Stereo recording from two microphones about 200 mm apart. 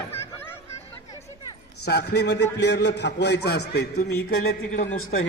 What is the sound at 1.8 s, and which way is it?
A man's voice, 55° left (ahead or behind).